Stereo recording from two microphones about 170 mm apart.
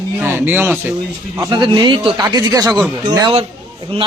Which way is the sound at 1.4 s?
25° right (ahead or behind).